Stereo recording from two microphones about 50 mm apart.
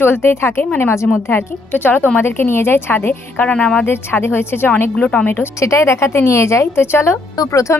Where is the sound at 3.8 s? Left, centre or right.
Left.